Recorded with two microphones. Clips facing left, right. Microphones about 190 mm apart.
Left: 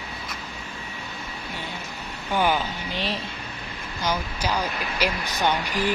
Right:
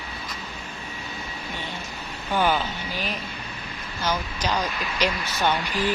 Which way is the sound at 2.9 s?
30° left (ahead or behind).